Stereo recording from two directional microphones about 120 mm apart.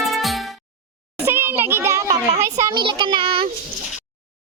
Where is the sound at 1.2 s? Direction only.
20° right (ahead or behind).